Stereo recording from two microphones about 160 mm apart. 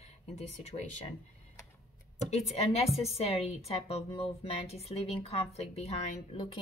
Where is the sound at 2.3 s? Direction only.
40° left (ahead or behind).